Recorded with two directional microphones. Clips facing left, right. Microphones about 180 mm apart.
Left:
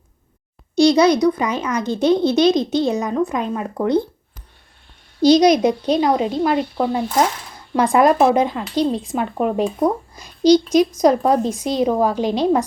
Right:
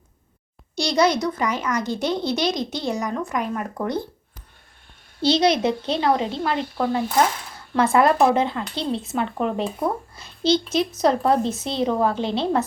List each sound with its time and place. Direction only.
0.8 s speech: 20° left (ahead or behind)
5.2 s speech: 15° left (ahead or behind)